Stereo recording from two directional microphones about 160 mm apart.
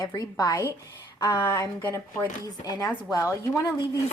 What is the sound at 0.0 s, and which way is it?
Speech, 25° left (ahead or behind).